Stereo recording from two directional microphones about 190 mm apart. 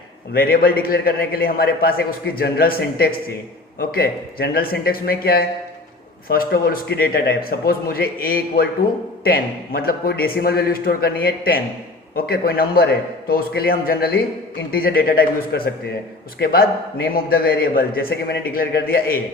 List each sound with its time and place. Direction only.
0.3 s a man's voice: 55° left (ahead or behind)